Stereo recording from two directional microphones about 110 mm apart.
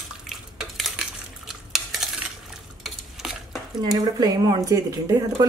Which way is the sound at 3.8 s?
35° right (ahead or behind).